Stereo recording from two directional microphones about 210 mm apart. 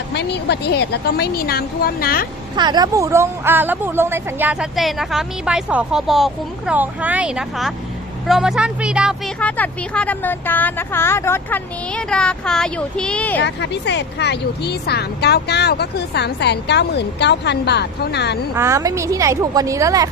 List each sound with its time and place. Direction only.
0.1 s speech: 55° left (ahead or behind)
2.6 s a woman's voice: 20° right (ahead or behind); by 9.1 s 5° right (ahead or behind)
9.4 s speech: 5° left (ahead or behind)
13.4 s speech: 55° left (ahead or behind)
18.5 s a woman's voice: 15° right (ahead or behind)